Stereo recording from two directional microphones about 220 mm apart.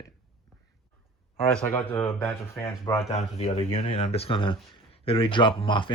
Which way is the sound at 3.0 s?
30° left (ahead or behind).